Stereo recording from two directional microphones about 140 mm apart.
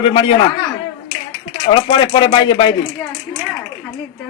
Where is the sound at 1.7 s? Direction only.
35° left (ahead or behind).